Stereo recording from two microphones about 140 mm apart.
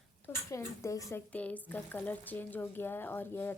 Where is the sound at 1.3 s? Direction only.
10° left (ahead or behind).